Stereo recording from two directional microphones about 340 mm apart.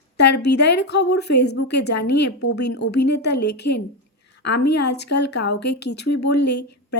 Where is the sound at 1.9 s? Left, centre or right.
Left.